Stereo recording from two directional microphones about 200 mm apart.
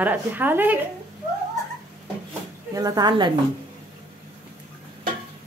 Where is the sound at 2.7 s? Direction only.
20° right (ahead or behind).